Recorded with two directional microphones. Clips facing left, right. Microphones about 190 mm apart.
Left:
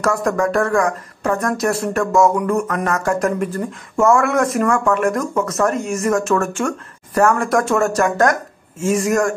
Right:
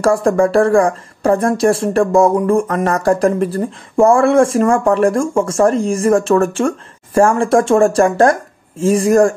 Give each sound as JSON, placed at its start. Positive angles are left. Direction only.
{"t": 0.0, "sound": "speech", "side_deg": -30}